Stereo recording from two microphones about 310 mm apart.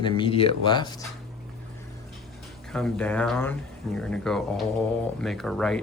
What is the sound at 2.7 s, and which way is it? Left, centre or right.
Speech, centre.